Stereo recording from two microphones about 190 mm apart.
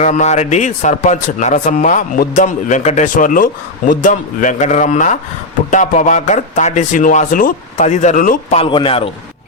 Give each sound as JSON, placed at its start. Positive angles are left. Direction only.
{"t": 0.0, "sound": "speech", "side_deg": 40}